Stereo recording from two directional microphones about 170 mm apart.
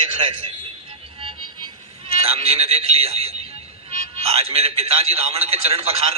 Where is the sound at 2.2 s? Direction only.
35° right (ahead or behind).